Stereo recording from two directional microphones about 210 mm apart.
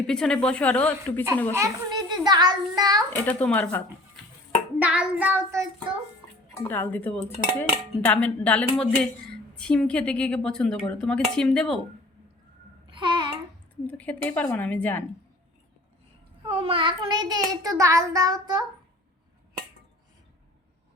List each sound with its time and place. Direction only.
0.1 s a woman's voice: 5° left (ahead or behind)
1.5 s a child's voice: 20° right (ahead or behind)
3.2 s dishes: 5° left (ahead or behind)
4.8 s child singing: 5° right (ahead or behind)
6.7 s dishes: 10° left (ahead or behind)
9.6 s a woman's voice: 5° left (ahead or behind)
12.9 s babbling: 20° right (ahead or behind)
13.8 s dishes: 5° left (ahead or behind)
16.5 s a child's voice: 25° right (ahead or behind)